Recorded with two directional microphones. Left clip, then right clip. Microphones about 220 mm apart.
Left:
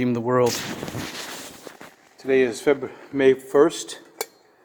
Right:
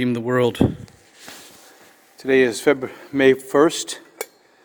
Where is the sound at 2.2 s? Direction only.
45° right (ahead or behind).